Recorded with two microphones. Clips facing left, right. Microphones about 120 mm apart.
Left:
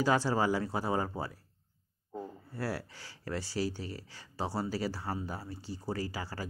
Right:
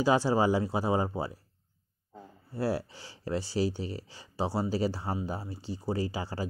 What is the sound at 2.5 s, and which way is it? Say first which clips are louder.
Speech: right 7 dB; 15° right (ahead or behind).